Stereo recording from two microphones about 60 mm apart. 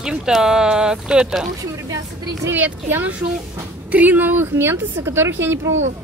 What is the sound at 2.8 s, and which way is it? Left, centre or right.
Speech, right.